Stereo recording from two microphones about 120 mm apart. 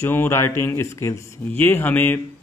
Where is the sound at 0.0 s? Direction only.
20° left (ahead or behind).